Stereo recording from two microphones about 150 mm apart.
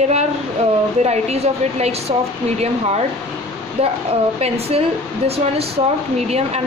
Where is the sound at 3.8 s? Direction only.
40° right (ahead or behind).